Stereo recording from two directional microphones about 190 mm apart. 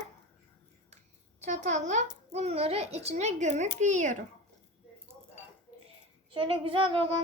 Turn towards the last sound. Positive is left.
turn(degrees=-30)  # may be behind; listen again after turning